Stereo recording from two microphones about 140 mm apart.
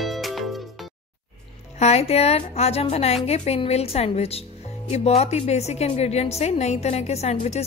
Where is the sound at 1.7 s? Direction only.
50° left (ahead or behind).